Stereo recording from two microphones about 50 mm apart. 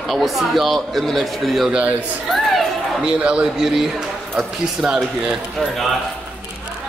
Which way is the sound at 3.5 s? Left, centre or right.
Centre.